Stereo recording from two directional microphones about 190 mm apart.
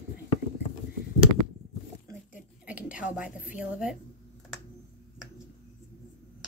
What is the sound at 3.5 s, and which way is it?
Speech, 5° right (ahead or behind).